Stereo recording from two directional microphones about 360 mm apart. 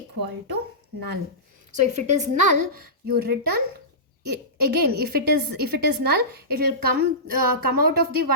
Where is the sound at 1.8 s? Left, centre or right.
Right.